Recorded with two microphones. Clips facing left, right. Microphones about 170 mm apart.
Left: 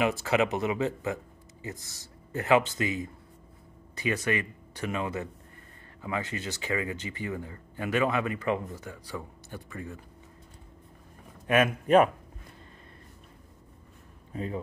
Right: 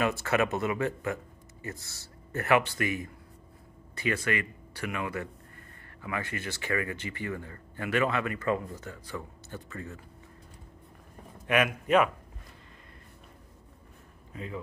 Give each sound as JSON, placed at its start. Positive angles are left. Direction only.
{"t": 0.0, "sound": "speech", "side_deg": 15}
{"t": 11.6, "sound": "speech", "side_deg": 35}
{"t": 14.3, "sound": "speech", "side_deg": 35}